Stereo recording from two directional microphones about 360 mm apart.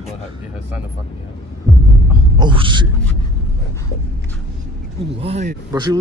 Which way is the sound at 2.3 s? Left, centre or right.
Centre.